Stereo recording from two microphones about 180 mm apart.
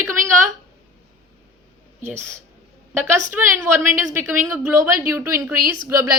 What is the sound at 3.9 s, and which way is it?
Speech, 15° right (ahead or behind).